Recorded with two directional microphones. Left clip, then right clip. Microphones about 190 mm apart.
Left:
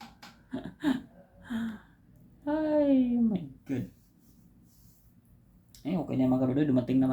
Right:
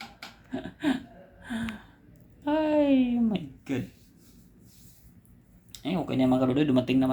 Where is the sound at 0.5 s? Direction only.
20° left (ahead or behind).